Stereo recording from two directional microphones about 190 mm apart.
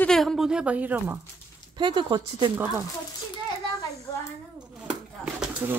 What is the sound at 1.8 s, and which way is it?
Speech, 25° right (ahead or behind).